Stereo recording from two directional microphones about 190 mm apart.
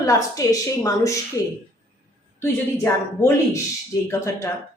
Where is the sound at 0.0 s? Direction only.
15° left (ahead or behind).